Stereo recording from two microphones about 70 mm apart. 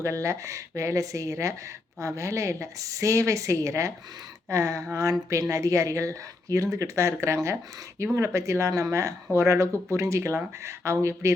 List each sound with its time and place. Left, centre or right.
0.0 s speech: right